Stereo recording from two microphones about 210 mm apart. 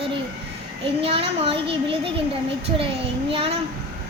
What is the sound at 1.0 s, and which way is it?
Speech, 25° right (ahead or behind).